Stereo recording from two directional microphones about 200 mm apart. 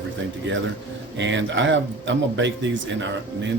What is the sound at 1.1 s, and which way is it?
Speech, 65° right (ahead or behind).